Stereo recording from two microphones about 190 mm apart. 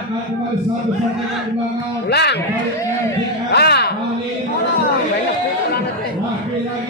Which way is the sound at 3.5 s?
60° left (ahead or behind).